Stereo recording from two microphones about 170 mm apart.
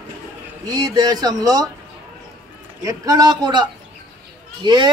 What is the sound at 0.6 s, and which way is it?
Speech, 20° right (ahead or behind).